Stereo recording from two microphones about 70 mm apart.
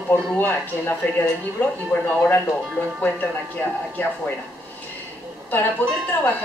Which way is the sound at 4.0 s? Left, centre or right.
Left.